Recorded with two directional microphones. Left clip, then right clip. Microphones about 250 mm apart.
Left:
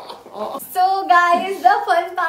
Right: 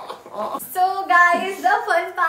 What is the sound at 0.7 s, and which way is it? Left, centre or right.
Speech, centre.